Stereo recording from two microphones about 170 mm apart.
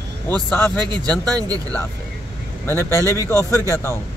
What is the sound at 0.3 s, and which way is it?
Speech, 10° left (ahead or behind).